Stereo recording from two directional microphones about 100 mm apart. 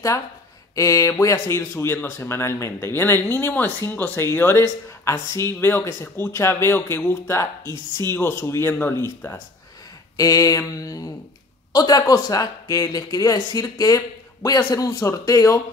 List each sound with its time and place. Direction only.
0.7 s speech: 35° left (ahead or behind)
5.6 s speech: 20° left (ahead or behind)
10.1 s speech: 35° left (ahead or behind)
14.6 s speech: 25° left (ahead or behind)